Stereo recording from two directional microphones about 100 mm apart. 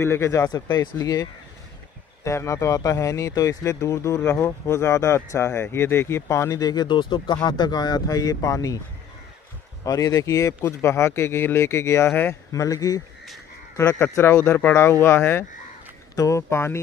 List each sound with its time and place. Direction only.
0.0 s speech: 25° left (ahead or behind)
9.8 s speech: 35° left (ahead or behind)
12.5 s speech: 35° left (ahead or behind)
13.7 s speech: 25° left (ahead or behind)